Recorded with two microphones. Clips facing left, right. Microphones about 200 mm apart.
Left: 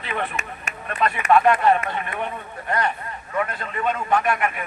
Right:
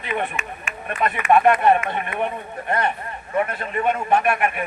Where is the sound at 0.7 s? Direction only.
40° left (ahead or behind).